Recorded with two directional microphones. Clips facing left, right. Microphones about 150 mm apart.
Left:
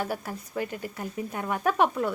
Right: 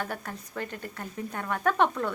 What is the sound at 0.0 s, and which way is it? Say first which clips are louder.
A woman's voice: left 3 dB; 10° left (ahead or behind).